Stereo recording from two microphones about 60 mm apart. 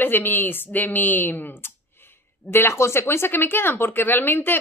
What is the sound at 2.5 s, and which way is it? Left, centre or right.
Speech, left.